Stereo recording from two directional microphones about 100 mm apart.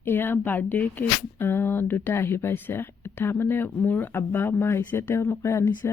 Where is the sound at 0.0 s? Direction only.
20° left (ahead or behind).